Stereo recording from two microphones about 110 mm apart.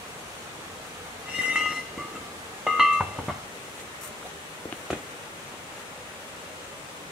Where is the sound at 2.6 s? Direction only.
5° right (ahead or behind).